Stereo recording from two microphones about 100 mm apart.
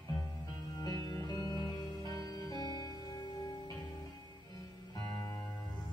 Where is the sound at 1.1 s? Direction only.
40° left (ahead or behind).